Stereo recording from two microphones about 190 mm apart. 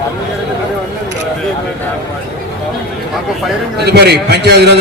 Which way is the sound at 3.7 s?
60° right (ahead or behind).